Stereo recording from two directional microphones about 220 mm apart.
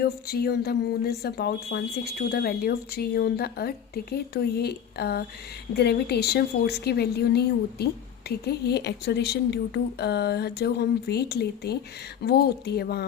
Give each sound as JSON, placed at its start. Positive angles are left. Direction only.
{"t": 0.0, "sound": "speech", "side_deg": 45}